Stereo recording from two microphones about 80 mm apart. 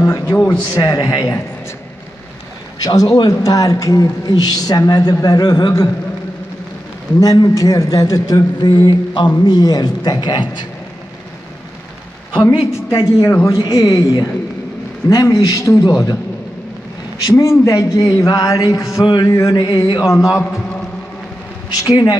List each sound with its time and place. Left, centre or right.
0.0 s a man's voice: left
0.7 s a man's voice: left
2.8 s a man's voice: left
7.2 s a man's voice: left
8.5 s mantra: left
9.4 s speech: left
12.4 s a woman's voice: left
15.0 s a woman's voice: left
17.4 s a woman's voice: left
19.0 s speech: left
20.1 s a woman's voice: left
21.8 s a man's voice: left